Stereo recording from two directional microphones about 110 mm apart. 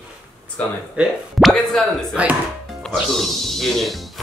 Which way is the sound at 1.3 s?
Centre (ahead or behind).